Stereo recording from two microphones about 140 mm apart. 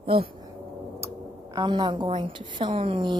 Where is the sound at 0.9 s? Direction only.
20° right (ahead or behind).